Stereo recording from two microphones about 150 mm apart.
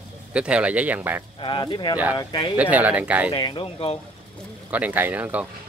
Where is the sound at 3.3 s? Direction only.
30° left (ahead or behind).